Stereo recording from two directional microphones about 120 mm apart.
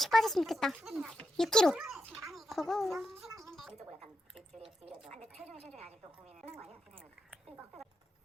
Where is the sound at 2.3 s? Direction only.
Centre (ahead or behind).